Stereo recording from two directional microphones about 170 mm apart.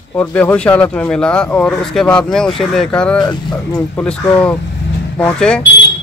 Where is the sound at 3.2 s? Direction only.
25° left (ahead or behind).